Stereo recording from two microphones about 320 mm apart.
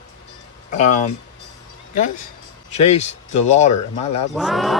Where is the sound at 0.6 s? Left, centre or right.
Left.